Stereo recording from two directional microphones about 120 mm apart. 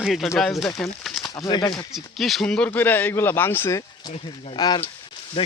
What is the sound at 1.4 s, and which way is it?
Speech, 35° left (ahead or behind).